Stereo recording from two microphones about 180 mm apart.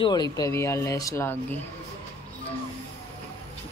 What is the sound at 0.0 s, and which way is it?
A woman's voice, 25° left (ahead or behind).